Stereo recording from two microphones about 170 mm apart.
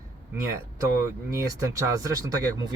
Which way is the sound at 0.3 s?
20° right (ahead or behind).